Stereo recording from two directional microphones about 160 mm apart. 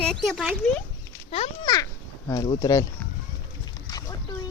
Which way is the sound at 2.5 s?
20° left (ahead or behind).